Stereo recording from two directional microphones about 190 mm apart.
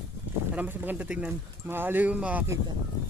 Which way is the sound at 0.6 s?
10° right (ahead or behind).